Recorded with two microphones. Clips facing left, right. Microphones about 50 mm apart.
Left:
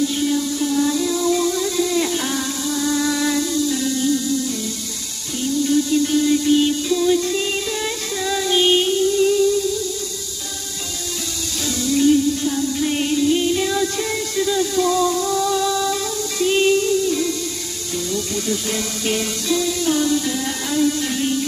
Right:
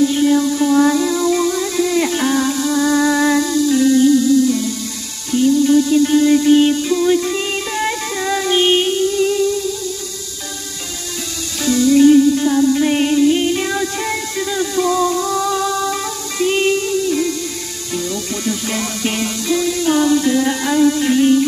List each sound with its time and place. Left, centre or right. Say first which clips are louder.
0.1 s a sound: right 6 dB; right
0.9 s music: right 3 dB; right
11.6 s music: right 7 dB; centre
19.9 s music: right 7 dB; right